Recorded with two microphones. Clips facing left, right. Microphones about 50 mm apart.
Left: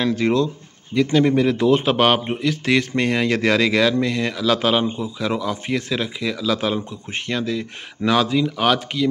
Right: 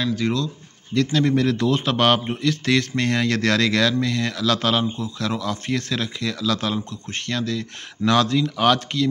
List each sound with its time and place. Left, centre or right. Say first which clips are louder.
0.0 s speech: left 4 dB; left
0.9 s speech: left 3 dB; centre